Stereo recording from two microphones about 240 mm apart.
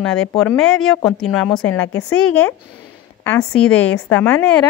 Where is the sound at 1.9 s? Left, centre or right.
Left.